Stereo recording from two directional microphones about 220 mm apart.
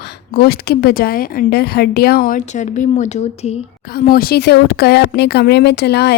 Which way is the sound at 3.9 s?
40° left (ahead or behind).